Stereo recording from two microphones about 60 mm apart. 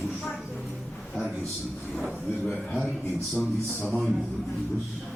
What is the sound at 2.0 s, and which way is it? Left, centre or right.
Speech, centre.